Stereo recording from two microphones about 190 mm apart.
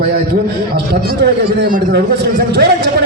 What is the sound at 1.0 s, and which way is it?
A man's voice, 50° right (ahead or behind).